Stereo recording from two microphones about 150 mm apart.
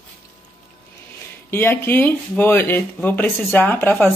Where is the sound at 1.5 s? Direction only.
15° left (ahead or behind).